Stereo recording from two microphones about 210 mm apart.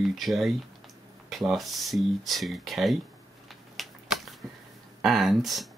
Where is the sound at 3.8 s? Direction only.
Centre (ahead or behind).